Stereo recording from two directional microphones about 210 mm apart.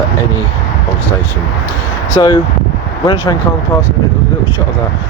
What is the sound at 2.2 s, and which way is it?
Speech, 20° left (ahead or behind).